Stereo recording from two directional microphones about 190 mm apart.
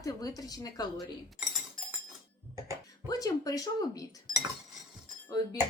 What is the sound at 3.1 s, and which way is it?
Speech, 20° left (ahead or behind).